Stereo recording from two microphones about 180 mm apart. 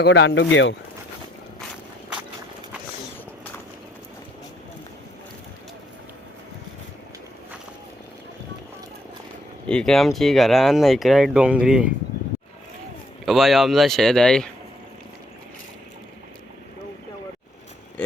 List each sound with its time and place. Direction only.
0.0 s speech: 80° left
9.6 s speech: 5° left (ahead or behind)
13.2 s speech: centre (ahead or behind)